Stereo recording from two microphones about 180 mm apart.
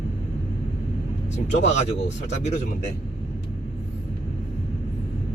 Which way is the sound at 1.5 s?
40° left (ahead or behind).